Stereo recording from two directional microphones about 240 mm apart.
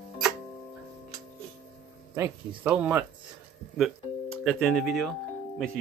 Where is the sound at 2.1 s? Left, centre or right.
Centre.